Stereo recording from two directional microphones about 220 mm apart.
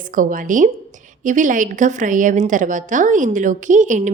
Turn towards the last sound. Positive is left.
turn(degrees=-35)  # may be behind; listen again after turning